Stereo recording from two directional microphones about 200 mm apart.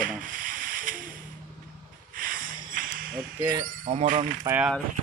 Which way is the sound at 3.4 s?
20° right (ahead or behind).